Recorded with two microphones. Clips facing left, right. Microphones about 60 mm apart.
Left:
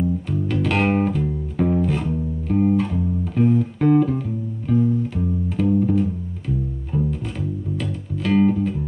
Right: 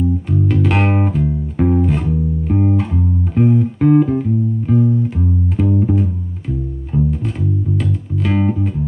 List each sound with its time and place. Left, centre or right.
0.5 s music: centre